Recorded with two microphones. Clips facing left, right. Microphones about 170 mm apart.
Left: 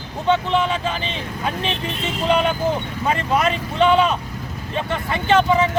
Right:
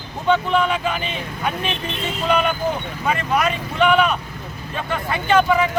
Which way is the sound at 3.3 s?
30° left (ahead or behind).